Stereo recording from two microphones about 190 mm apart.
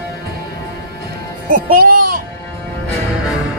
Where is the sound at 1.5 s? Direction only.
50° right (ahead or behind).